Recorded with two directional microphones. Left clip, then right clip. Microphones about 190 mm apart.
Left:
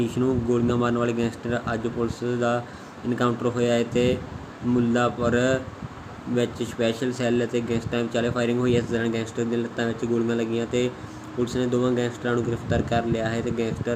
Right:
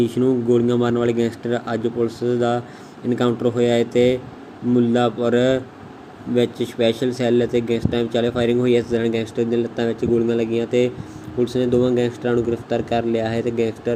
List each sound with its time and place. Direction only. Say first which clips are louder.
0.0 s speech: right 6 dB; 15° right (ahead or behind)